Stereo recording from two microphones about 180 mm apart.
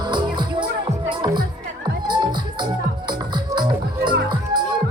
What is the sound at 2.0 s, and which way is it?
Music, 25° right (ahead or behind).